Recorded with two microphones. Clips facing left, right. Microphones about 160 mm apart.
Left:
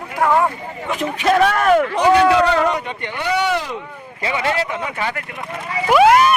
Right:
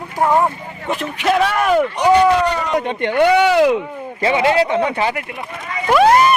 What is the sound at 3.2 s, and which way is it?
Speech, 90° right.